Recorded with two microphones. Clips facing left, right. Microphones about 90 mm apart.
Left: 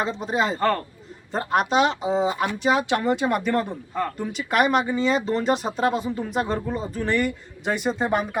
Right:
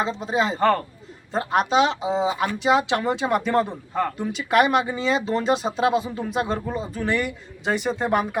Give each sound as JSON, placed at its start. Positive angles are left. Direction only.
{"t": 0.0, "sound": "speech", "side_deg": 5}
{"t": 3.5, "sound": "a man's voice", "side_deg": -20}
{"t": 4.2, "sound": "speech", "side_deg": 0}